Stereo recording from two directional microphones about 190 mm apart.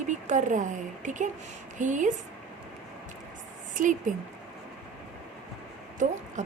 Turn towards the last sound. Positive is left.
turn(degrees=-40)  # may be behind; listen again after turning